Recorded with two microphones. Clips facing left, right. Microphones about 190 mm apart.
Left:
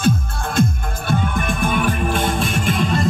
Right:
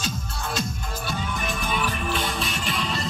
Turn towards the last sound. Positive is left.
turn(degrees=50)  # may be behind; listen again after turning